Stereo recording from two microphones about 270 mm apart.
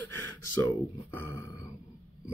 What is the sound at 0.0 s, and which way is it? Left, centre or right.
Speech, centre.